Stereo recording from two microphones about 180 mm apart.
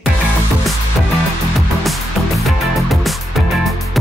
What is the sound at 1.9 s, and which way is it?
Music, centre (ahead or behind).